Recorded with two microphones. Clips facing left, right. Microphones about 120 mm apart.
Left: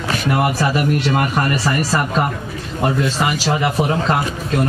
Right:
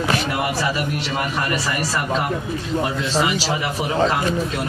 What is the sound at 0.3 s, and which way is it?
A man's voice, 50° left (ahead or behind).